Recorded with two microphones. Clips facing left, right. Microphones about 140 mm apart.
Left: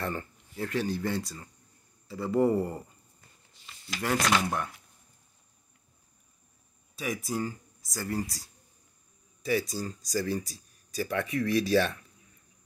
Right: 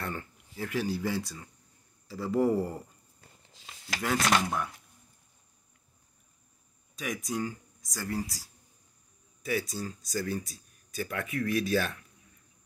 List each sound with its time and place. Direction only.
0.0 s speech: centre (ahead or behind)
3.5 s a sound: 90° right
4.0 s speech: centre (ahead or behind)
7.0 s speech: 5° left (ahead or behind)